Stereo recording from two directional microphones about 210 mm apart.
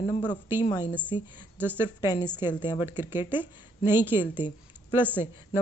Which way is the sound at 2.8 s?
10° right (ahead or behind).